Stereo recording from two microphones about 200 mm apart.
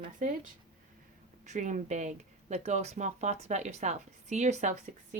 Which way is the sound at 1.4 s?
35° right (ahead or behind).